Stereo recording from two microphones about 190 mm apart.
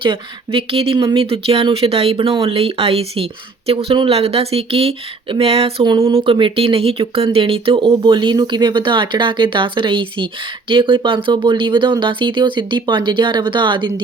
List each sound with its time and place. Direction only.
0.0 s speech: 25° right (ahead or behind)